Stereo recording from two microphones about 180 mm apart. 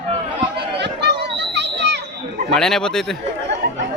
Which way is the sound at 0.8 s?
70° right (ahead or behind).